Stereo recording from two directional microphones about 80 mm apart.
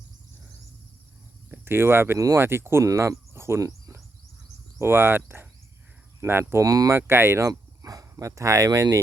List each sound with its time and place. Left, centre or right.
1.5 s speech: right
2.1 s speech: right
2.4 s speech: right
4.8 s speech: right
6.5 s speech: right
6.9 s speech: right